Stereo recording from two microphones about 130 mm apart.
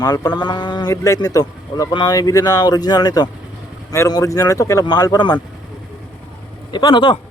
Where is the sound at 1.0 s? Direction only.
25° left (ahead or behind).